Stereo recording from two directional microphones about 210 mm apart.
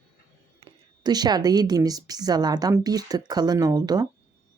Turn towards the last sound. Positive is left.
turn(degrees=-20)  # may be behind; listen again after turning